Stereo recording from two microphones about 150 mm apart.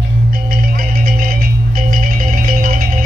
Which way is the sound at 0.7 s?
70° right (ahead or behind).